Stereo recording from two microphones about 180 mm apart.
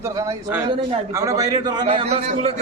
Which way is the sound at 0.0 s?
20° right (ahead or behind).